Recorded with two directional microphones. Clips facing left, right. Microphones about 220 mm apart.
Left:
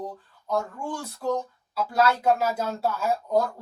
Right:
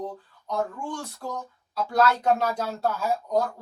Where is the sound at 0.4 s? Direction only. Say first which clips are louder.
Left 1 dB; 5° left (ahead or behind).